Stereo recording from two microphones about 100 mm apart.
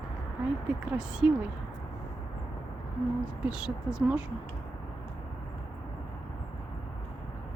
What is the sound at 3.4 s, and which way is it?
Speech, 10° right (ahead or behind).